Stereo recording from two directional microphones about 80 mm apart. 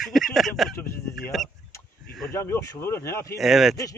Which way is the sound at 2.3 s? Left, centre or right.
Left.